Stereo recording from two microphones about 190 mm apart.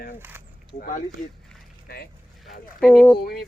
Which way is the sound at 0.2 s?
10° right (ahead or behind).